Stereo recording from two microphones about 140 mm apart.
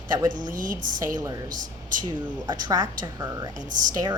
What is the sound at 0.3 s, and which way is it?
Speech, 70° right (ahead or behind).